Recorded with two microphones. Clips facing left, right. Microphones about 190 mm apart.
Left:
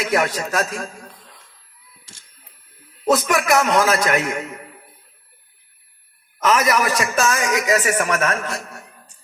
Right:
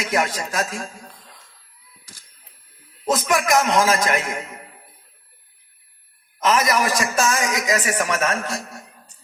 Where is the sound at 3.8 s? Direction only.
45° left (ahead or behind).